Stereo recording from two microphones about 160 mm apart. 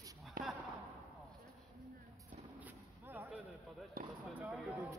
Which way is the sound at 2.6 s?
10° right (ahead or behind).